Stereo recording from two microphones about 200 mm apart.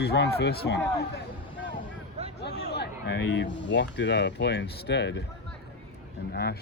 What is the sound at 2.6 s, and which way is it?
Speech, 55° left (ahead or behind).